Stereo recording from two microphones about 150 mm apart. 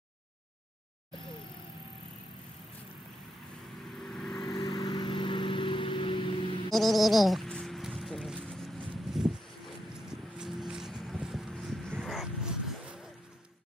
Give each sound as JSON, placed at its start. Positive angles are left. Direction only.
{"t": 4.0, "sound": "vehicle", "side_deg": 5}
{"t": 4.6, "sound": "vehicle", "side_deg": 35}
{"t": 6.7, "sound": "music", "side_deg": 0}
{"t": 9.1, "sound": "a sound", "side_deg": 0}
{"t": 10.0, "sound": "vehicle", "side_deg": -5}